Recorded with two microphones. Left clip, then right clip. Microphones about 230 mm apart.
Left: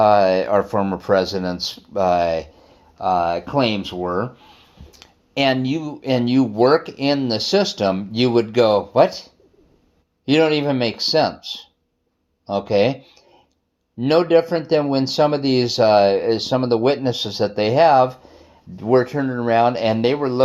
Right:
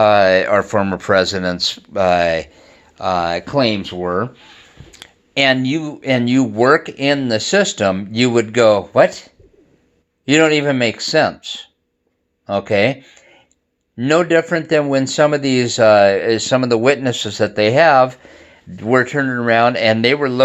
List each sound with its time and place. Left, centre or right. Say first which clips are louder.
0.0 s speech: right 3 dB; right
14.0 s speech: right 1 dB; right